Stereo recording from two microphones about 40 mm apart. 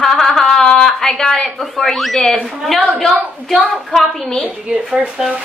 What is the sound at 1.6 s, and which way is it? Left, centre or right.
Speech, centre.